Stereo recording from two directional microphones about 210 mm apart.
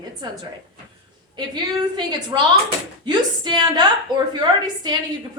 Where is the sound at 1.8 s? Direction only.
20° right (ahead or behind).